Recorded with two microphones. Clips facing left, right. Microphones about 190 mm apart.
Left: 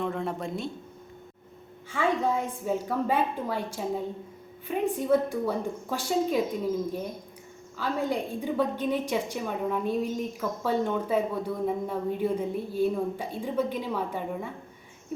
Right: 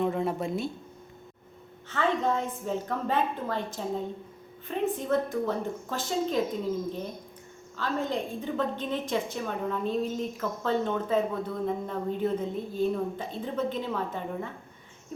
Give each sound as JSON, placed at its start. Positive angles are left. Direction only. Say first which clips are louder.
{"t": 0.0, "sound": "speech", "louder": "right 3 dB", "side_deg": -5}
{"t": 1.9, "sound": "speech", "louder": "left 1 dB", "side_deg": 10}
{"t": 7.8, "sound": "speech", "louder": "left 1 dB", "side_deg": 10}